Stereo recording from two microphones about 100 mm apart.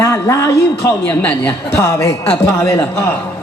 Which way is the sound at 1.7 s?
30° left (ahead or behind).